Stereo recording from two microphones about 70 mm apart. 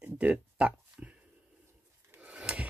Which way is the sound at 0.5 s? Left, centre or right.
Centre.